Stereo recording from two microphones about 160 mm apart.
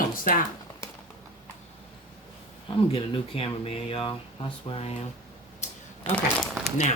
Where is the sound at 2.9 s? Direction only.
35° left (ahead or behind).